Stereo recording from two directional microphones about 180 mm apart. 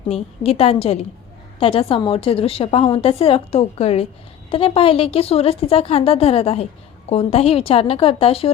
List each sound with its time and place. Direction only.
0.1 s a woman's voice: 35° left (ahead or behind)